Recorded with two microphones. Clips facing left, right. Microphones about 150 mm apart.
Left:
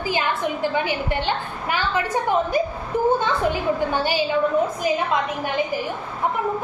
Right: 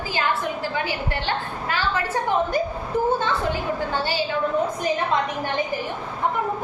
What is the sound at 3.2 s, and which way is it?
A woman's voice, 15° left (ahead or behind).